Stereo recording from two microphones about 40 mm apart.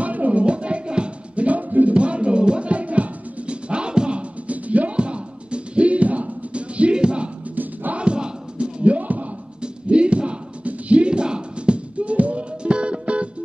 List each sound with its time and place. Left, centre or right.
0.0 s music: right
2.0 s music: right
7.5 s music: right
8.0 s music: right
8.9 s music: right
9.6 s music: right